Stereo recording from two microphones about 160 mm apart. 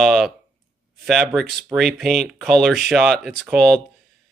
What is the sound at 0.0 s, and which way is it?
Speech, centre (ahead or behind).